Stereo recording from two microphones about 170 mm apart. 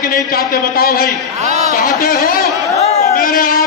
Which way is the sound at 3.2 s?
55° left (ahead or behind).